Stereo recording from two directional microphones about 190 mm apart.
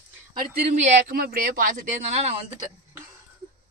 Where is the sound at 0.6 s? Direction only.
40° right (ahead or behind).